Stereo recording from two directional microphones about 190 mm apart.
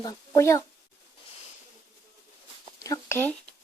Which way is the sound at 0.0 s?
15° left (ahead or behind).